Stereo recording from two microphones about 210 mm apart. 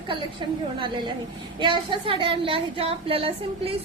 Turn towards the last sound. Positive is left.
turn(degrees=-25)  # may be behind; listen again after turning